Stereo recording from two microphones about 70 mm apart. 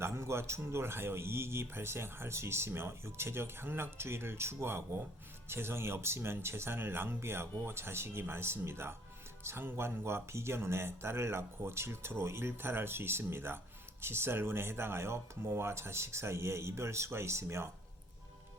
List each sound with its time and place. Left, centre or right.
0.0 s speech: right